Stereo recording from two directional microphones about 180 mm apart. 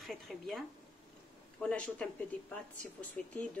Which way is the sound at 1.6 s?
5° left (ahead or behind).